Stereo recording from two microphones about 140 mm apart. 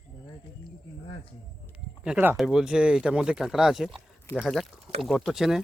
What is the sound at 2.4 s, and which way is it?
Speech, centre (ahead or behind).